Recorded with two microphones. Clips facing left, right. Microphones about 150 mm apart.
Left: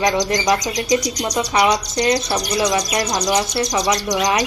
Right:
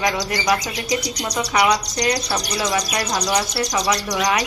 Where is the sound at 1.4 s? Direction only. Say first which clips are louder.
Left 1 dB; 25° left (ahead or behind).